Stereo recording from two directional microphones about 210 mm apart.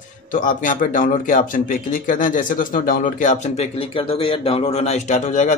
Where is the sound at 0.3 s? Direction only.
40° left (ahead or behind).